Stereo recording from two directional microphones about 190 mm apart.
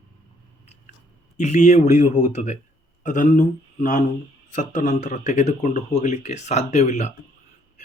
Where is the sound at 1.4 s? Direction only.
35° left (ahead or behind).